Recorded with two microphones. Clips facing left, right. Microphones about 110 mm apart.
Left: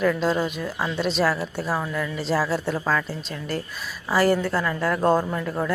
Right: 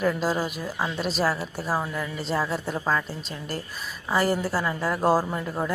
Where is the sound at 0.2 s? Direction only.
5° right (ahead or behind).